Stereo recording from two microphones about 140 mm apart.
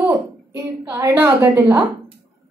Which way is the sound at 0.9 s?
20° right (ahead or behind).